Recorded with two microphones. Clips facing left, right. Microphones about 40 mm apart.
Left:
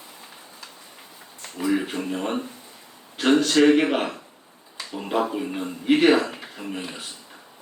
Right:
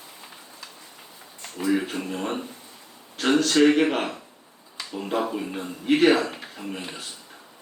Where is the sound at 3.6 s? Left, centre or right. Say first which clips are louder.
Left 1 dB; centre.